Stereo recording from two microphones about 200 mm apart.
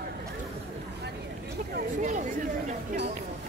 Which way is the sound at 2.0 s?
35° right (ahead or behind).